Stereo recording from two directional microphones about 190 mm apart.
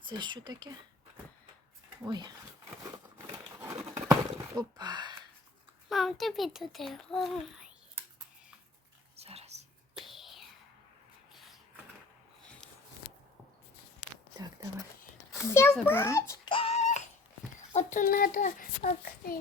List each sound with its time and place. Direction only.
0.2 s speech: 25° right (ahead or behind)
2.0 s speech: 20° right (ahead or behind)
3.2 s a sound: 15° right (ahead or behind)
5.9 s a child's voice: centre (ahead or behind)
9.1 s whispering: 30° right (ahead or behind)
10.0 s whispering: centre (ahead or behind)
14.3 s whispering: 20° right (ahead or behind)
15.3 s a sound: 15° left (ahead or behind)
15.7 s a child's voice: 10° left (ahead or behind)
16.5 s a sound: 30° left (ahead or behind)
17.7 s a child's voice: 45° left (ahead or behind)